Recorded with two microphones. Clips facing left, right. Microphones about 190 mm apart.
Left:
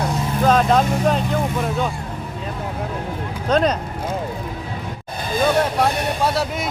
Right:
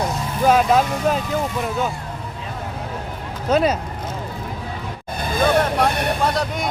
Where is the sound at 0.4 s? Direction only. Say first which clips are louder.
Right 1 dB; 5° right (ahead or behind).